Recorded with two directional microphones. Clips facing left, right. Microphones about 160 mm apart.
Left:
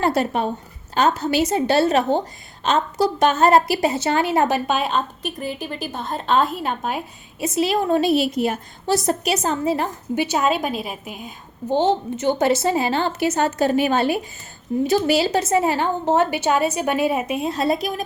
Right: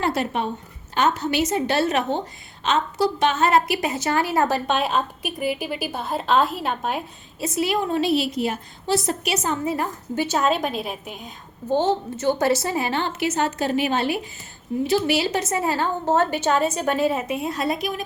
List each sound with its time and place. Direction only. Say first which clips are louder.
0.0 s a woman's voice: left 3 dB; 40° left (ahead or behind); by 4.6 s 20° left (ahead or behind)
4.6 s a woman's voice: left 1 dB; centre (ahead or behind)
7.3 s a woman's voice: left 3 dB; 25° left (ahead or behind)
7.9 s a woman's voice: left 4 dB; 45° left (ahead or behind); by 9.9 s 30° left (ahead or behind)
10.2 s a woman's voice: left 1 dB; 10° left (ahead or behind)
11.7 s a woman's voice: left 2 dB; 15° left (ahead or behind); by 18.0 s 35° left (ahead or behind)